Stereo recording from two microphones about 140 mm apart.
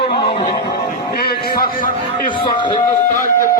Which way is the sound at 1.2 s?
90° left.